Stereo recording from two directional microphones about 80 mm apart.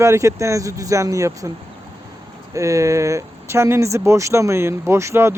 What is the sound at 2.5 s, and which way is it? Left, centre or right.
Speech, right.